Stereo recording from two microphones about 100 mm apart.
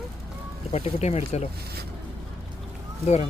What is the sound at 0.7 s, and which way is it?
Speech, 90° left.